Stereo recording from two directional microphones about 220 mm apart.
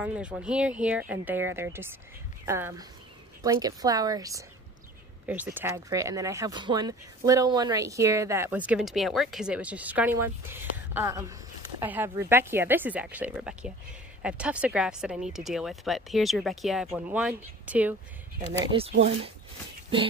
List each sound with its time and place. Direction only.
0.0 s speech: 5° right (ahead or behind)
18.7 s speech: 25° right (ahead or behind)